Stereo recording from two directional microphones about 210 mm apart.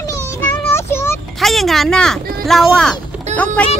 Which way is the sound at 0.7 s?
10° left (ahead or behind).